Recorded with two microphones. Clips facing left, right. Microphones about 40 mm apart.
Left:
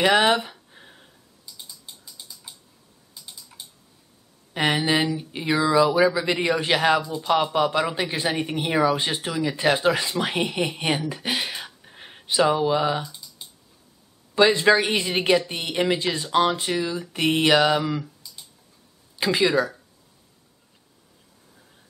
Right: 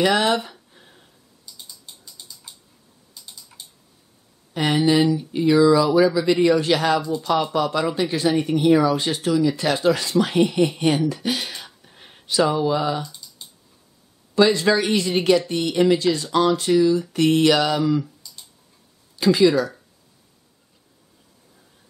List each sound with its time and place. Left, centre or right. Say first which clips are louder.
0.0 s speech: even; centre
0.4 s a sound: even; centre
1.6 s typing: even; centre
4.6 s speech: right 3 dB; left
13.0 s typing: right 1 dB; centre
14.3 s speech: even; left
18.0 s clicking: even; centre
19.1 s speech: right 4 dB; left